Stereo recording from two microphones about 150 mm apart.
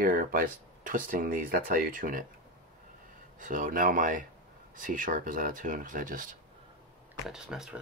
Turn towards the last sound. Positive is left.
turn(degrees=-5)  # may be behind; listen again after turning